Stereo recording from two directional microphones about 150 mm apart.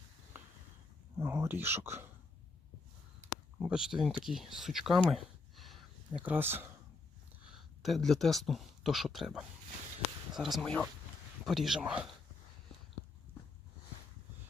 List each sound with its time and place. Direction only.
1.2 s speech: 15° right (ahead or behind)
3.6 s speech: 5° right (ahead or behind)
6.2 s speech: 15° right (ahead or behind)
7.8 s speech: centre (ahead or behind)